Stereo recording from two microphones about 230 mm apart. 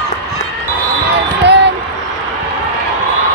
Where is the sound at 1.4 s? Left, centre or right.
Right.